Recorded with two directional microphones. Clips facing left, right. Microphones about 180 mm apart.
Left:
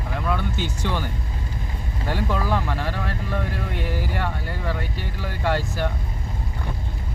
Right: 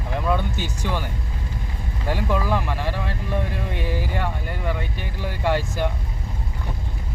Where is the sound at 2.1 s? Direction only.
15° right (ahead or behind).